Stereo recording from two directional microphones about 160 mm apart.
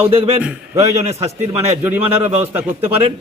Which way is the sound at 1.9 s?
15° right (ahead or behind).